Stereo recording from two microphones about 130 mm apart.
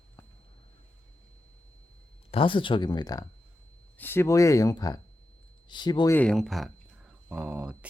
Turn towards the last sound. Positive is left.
turn(degrees=-10)  # may be behind; listen again after turning